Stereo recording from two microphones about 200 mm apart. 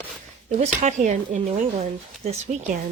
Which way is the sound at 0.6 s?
35° right (ahead or behind).